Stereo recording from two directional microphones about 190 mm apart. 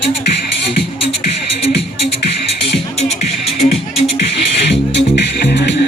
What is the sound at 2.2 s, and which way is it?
Music, 60° left (ahead or behind).